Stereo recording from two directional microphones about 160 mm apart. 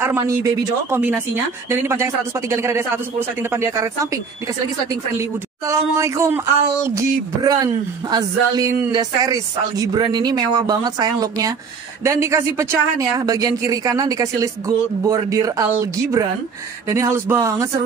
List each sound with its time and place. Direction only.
0.0 s speech: 15° right (ahead or behind)
5.7 s speech: 20° right (ahead or behind)